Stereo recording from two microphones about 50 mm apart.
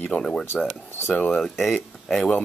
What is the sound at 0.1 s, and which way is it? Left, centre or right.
Speech, left.